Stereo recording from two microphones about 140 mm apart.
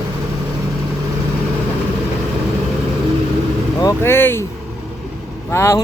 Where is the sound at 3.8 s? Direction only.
15° left (ahead or behind).